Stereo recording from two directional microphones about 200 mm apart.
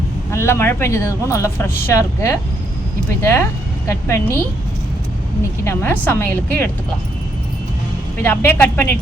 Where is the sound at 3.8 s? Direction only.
10° left (ahead or behind).